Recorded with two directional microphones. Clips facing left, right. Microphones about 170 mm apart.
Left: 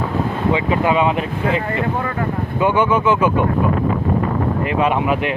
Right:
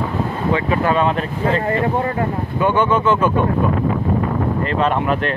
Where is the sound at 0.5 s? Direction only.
15° left (ahead or behind).